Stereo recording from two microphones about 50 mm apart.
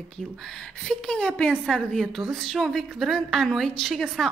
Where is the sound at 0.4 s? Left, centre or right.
Centre.